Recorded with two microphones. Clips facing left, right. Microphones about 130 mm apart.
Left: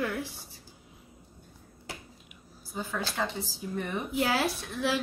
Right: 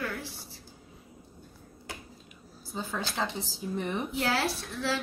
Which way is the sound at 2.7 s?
25° right (ahead or behind).